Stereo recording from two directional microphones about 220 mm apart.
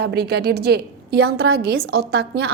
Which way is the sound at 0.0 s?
45° right (ahead or behind).